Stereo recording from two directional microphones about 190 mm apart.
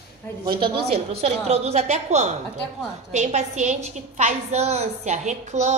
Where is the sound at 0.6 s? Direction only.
30° right (ahead or behind).